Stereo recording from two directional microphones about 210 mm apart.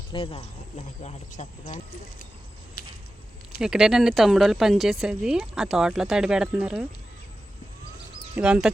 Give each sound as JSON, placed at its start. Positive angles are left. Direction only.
{"t": 0.1, "sound": "speech", "side_deg": 25}
{"t": 3.6, "sound": "a woman's voice", "side_deg": -5}
{"t": 8.4, "sound": "a woman's voice", "side_deg": -5}